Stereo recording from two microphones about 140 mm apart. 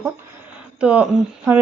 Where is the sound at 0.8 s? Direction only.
10° right (ahead or behind).